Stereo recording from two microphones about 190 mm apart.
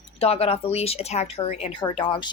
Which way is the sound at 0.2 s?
30° left (ahead or behind).